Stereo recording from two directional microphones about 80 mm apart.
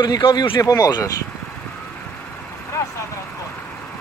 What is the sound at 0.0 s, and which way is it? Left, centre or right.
Speech, left.